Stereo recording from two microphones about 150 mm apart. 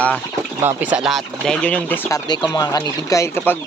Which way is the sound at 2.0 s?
25° left (ahead or behind).